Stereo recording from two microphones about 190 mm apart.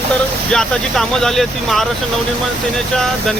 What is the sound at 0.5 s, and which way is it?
Speech, centre (ahead or behind).